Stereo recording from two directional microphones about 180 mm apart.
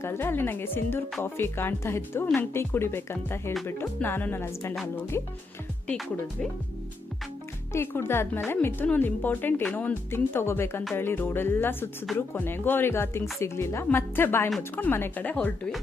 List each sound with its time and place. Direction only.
0.0 s a woman's voice: 15° left (ahead or behind)
5.9 s speech: centre (ahead or behind)
7.7 s a woman's voice: 15° left (ahead or behind)